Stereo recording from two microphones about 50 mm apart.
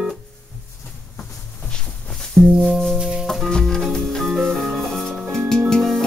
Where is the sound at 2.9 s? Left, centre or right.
Centre.